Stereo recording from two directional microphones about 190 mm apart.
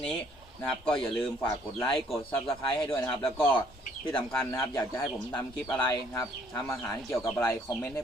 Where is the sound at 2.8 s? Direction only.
20° left (ahead or behind).